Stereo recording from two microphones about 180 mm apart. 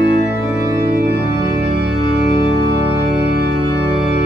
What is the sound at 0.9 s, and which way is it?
Organ, 65° right (ahead or behind).